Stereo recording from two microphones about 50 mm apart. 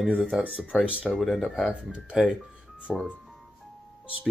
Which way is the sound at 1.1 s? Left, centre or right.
Centre.